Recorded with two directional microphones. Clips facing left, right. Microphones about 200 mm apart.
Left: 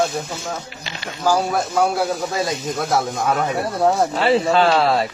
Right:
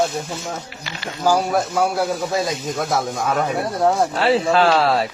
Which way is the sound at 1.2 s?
Centre (ahead or behind).